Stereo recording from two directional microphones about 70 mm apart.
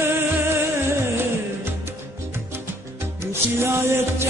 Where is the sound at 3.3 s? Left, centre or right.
Right.